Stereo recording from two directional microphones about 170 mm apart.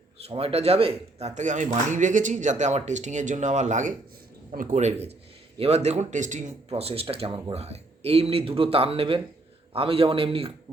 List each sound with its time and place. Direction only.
0.3 s speech: 35° right (ahead or behind)